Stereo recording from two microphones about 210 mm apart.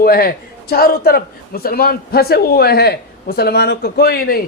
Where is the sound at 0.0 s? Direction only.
45° left (ahead or behind).